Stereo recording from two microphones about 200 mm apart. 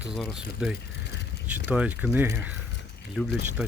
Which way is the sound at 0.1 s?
Centre (ahead or behind).